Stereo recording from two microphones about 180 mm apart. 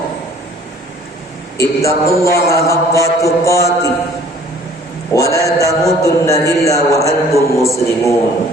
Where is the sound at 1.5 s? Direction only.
15° left (ahead or behind).